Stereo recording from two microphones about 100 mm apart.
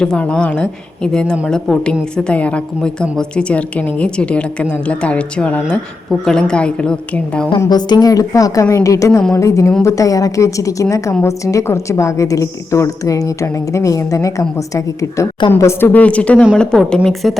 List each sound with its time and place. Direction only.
0.0 s a woman's voice: 10° left (ahead or behind)
7.7 s a woman's voice: 45° left (ahead or behind); by 15.9 s 30° left (ahead or behind)
15.9 s a woman's voice: 15° left (ahead or behind)